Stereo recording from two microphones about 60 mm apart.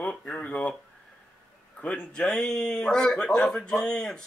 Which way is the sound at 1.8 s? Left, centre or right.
Centre.